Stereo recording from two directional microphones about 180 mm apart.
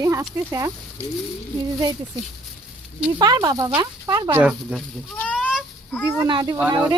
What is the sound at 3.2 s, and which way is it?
Speech, 20° right (ahead or behind).